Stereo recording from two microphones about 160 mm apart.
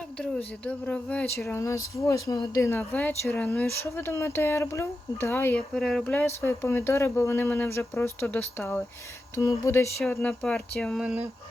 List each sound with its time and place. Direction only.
0.2 s speech: 10° left (ahead or behind)
5.7 s speech: centre (ahead or behind)
11.0 s speech: 10° right (ahead or behind)